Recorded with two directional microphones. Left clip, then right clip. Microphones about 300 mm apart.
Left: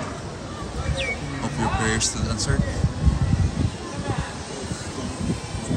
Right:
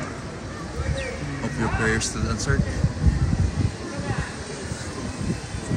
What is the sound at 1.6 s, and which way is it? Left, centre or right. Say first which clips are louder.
Speech: even; centre.